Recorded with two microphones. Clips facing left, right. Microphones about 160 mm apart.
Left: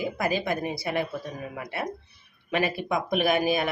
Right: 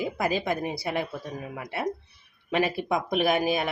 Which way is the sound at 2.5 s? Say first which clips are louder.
Right 1 dB; 25° right (ahead or behind).